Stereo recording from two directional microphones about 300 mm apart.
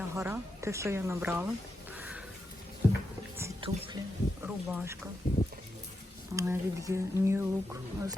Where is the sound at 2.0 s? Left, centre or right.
Centre.